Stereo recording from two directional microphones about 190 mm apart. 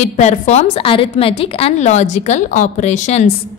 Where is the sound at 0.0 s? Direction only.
35° left (ahead or behind).